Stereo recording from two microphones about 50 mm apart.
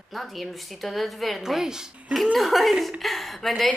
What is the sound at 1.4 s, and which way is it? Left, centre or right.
Speech, centre.